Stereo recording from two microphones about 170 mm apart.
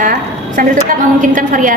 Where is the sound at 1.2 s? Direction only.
50° right (ahead or behind).